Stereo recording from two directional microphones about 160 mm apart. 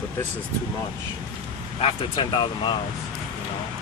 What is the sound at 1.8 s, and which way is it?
Speech, 30° left (ahead or behind).